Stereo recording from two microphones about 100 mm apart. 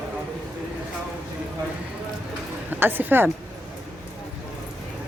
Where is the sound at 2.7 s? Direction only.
20° right (ahead or behind).